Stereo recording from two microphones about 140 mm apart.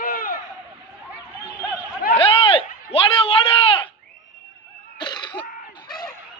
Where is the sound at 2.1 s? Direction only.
40° left (ahead or behind).